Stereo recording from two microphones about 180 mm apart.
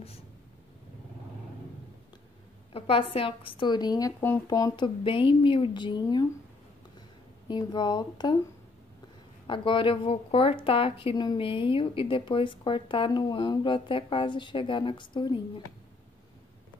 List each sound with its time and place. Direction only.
2.7 s a woman's voice: 30° left (ahead or behind)
7.4 s a woman's voice: 25° left (ahead or behind)
9.5 s a woman's voice: 30° left (ahead or behind)